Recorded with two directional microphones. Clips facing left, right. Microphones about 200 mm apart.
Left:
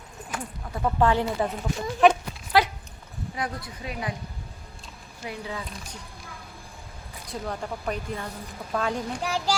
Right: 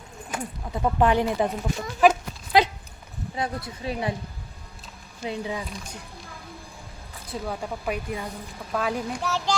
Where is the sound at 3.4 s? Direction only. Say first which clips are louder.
Right 3 dB; 25° right (ahead or behind).